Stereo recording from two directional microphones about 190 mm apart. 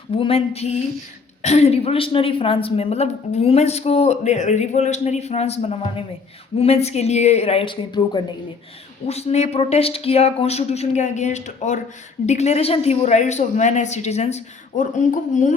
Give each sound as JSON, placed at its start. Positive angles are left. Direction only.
{"t": 0.2, "sound": "a woman's voice", "side_deg": 30}